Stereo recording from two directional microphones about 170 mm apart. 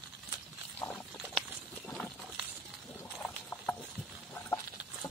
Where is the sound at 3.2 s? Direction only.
10° left (ahead or behind).